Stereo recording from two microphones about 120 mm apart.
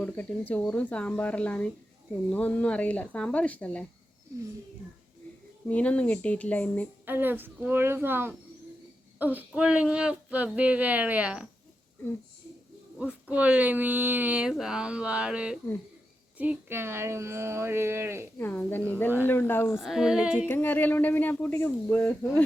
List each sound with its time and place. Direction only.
0.0 s speech: 15° left (ahead or behind)
5.6 s speech: 10° left (ahead or behind)
7.0 s speech: 15° right (ahead or behind)
13.0 s speech: 10° right (ahead or behind)
18.3 s speech: 20° left (ahead or behind)
19.7 s speech: 5° right (ahead or behind)
20.5 s speech: 15° left (ahead or behind)